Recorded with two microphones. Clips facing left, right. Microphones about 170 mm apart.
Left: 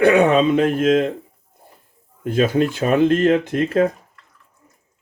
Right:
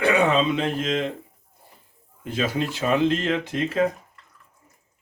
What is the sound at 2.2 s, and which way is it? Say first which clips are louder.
Speech: left 8 dB; 50° left (ahead or behind).